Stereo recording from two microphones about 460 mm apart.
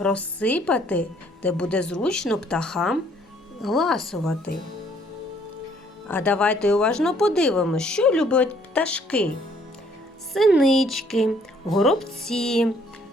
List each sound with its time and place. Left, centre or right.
0.0 s speech: centre
6.1 s speech: centre
10.3 s speech: centre